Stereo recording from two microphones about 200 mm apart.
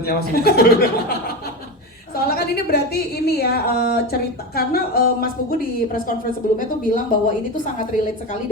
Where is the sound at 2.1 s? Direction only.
50° left (ahead or behind).